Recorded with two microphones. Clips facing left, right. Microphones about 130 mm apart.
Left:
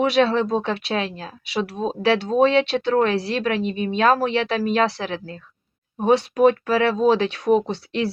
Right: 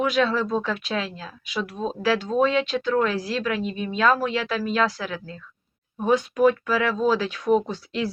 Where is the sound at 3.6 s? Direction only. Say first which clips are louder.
Left 4 dB; 25° left (ahead or behind).